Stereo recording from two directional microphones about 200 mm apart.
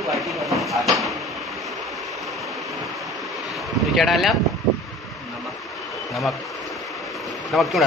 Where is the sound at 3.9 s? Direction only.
Centre (ahead or behind).